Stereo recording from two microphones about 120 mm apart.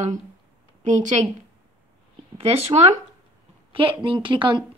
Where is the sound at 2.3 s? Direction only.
55° right (ahead or behind).